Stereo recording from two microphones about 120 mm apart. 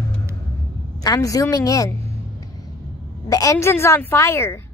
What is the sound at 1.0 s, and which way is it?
Speech, 30° left (ahead or behind).